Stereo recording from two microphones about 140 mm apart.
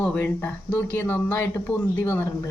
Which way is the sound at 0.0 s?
10° left (ahead or behind).